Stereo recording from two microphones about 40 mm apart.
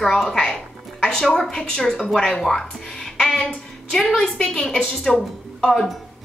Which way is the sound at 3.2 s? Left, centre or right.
Centre.